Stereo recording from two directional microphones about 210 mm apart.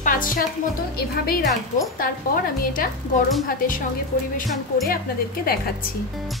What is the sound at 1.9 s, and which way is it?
Speech, 40° left (ahead or behind).